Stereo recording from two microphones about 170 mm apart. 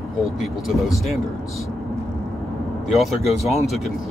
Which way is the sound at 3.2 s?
40° left (ahead or behind).